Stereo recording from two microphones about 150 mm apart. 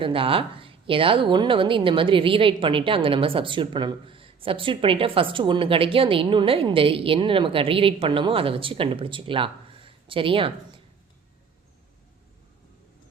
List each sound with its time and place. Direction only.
0.0 s a woman's voice: 35° right (ahead or behind)